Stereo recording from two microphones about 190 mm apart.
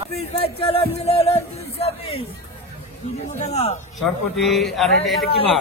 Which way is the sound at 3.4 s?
35° left (ahead or behind).